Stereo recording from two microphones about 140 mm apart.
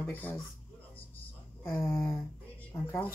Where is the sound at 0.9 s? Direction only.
15° left (ahead or behind).